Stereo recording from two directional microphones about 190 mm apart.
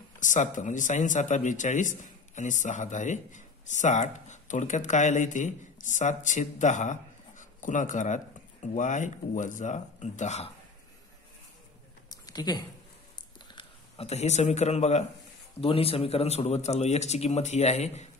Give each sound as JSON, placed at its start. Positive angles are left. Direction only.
{"t": 0.2, "sound": "a man's voice", "side_deg": 40}
{"t": 12.1, "sound": "a sound", "side_deg": 20}
{"t": 13.5, "sound": "a man's voice", "side_deg": 30}